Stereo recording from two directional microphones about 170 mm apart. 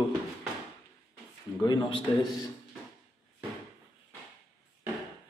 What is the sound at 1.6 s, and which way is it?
Speech, 25° left (ahead or behind).